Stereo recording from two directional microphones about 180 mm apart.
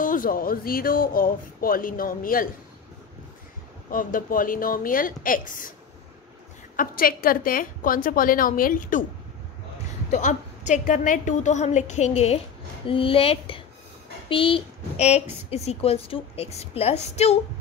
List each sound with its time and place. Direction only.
0.0 s speech: 50° left (ahead or behind)
3.9 s speech: 50° left (ahead or behind)
6.8 s speech: 55° left (ahead or behind)
10.1 s a woman's voice: 40° left (ahead or behind)